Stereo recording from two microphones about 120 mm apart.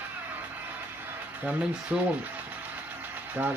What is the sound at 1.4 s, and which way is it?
Sewing machine, 10° right (ahead or behind).